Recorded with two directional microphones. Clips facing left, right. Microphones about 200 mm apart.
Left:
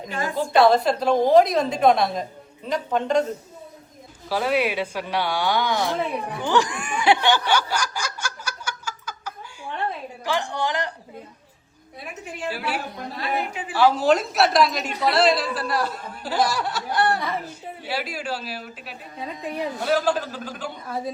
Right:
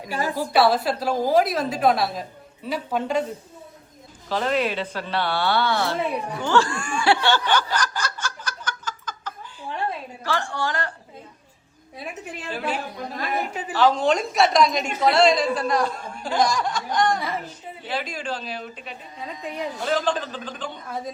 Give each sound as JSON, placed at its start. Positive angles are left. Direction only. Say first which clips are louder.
{"t": 0.3, "sound": "a woman's voice", "louder": "left 3 dB", "side_deg": -5}
{"t": 4.3, "sound": "a woman's voice", "louder": "left 1 dB", "side_deg": 10}
{"t": 12.5, "sound": "a man's voice", "louder": "even", "side_deg": 10}
{"t": 13.1, "sound": "a woman's voice", "louder": "even", "side_deg": -45}
{"t": 13.7, "sound": "a woman's voice", "louder": "left 1 dB", "side_deg": 10}